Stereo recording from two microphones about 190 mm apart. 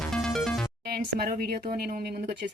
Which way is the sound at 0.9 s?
55° right (ahead or behind).